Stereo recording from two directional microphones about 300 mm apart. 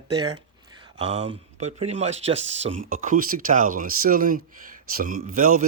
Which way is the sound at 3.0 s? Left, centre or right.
Right.